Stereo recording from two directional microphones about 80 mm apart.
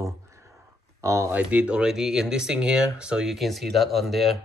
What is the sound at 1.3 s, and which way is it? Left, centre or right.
Speech, centre.